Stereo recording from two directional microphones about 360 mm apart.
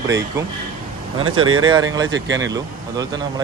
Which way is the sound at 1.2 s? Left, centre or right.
Right.